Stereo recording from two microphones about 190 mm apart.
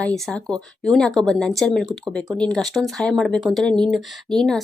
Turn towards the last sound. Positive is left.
turn(degrees=5)  # may be behind; listen again after turning